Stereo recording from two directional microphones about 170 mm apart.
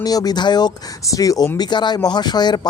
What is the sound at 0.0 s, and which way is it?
Speech, 20° left (ahead or behind).